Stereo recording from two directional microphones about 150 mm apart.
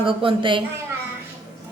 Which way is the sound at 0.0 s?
35° right (ahead or behind).